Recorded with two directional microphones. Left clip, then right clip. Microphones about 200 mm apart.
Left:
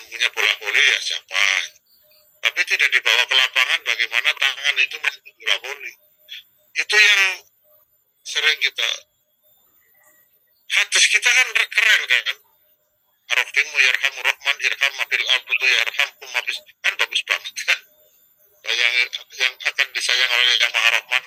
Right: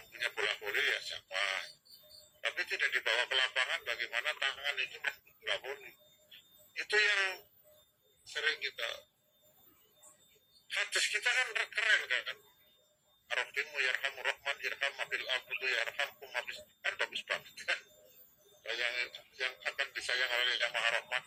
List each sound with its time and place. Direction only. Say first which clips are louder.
0.1 s a sound: left 16 dB; 60° left (ahead or behind)
2.4 s telephone: left 16 dB; 60° left (ahead or behind)
8.2 s speech: left 16 dB; 60° left (ahead or behind)
10.7 s speech: left 17 dB; 60° left (ahead or behind)